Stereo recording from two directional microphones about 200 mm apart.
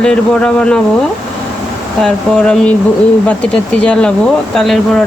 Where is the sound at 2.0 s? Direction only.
5° left (ahead or behind).